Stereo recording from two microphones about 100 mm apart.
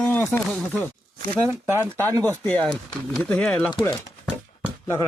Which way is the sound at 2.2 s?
15° left (ahead or behind).